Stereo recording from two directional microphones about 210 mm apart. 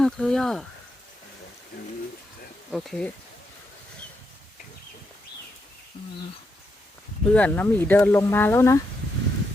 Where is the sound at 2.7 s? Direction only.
Centre (ahead or behind).